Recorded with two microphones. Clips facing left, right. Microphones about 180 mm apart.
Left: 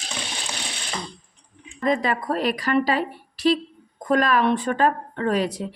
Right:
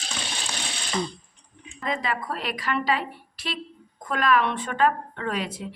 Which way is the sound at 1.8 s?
40° left (ahead or behind).